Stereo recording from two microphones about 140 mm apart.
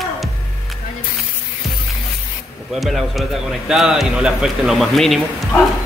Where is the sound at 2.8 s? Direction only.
Centre (ahead or behind).